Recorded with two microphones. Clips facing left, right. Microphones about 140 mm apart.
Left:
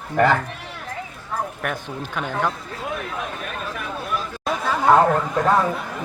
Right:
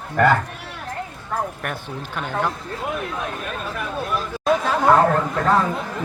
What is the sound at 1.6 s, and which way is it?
Speech, centre (ahead or behind).